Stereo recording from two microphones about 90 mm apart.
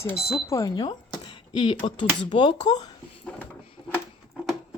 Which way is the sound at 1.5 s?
65° left (ahead or behind).